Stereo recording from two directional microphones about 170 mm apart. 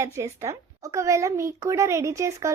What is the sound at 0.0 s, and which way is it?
Speech, 15° right (ahead or behind).